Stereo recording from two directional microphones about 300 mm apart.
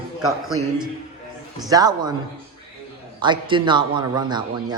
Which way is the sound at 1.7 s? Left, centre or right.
Centre.